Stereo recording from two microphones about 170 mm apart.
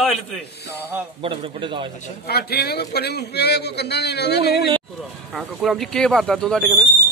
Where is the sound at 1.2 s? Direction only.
30° right (ahead or behind).